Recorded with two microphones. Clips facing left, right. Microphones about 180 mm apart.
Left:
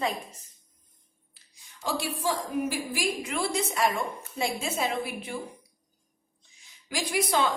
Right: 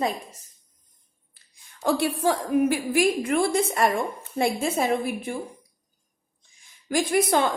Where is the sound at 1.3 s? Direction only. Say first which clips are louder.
Even; 55° right (ahead or behind).